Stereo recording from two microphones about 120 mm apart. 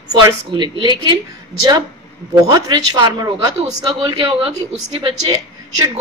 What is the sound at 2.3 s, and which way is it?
A woman's voice, 35° right (ahead or behind).